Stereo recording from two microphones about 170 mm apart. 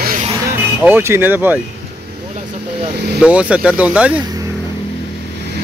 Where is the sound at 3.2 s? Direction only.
5° right (ahead or behind).